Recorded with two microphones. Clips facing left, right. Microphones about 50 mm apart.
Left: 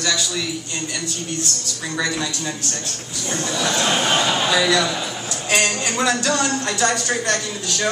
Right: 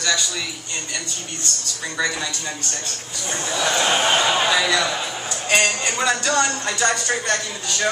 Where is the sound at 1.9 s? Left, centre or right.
Centre.